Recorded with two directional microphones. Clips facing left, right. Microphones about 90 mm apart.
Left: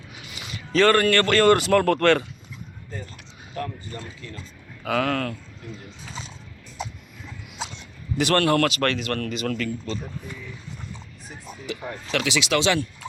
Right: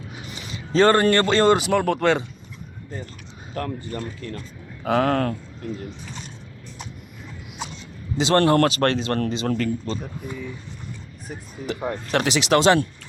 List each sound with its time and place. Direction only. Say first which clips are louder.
0.3 s a man's voice: right 2 dB; 35° right (ahead or behind); by 2.2 s 15° right (ahead or behind)
3.5 s speech: right 3 dB; 50° right (ahead or behind)
4.8 s a man's voice: right 4 dB; 35° right (ahead or behind)
8.2 s a man's voice: right 3 dB; 25° right (ahead or behind)
11.6 s a man's voice: right 6 dB; 40° right (ahead or behind)